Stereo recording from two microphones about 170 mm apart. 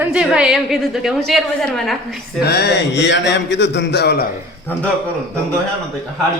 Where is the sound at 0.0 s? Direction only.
5° right (ahead or behind).